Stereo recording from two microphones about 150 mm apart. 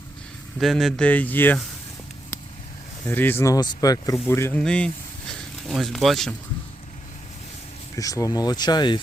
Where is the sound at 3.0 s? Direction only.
10° left (ahead or behind).